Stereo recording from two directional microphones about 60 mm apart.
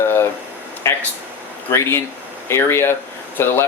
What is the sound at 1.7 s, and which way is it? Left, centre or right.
Speech, left.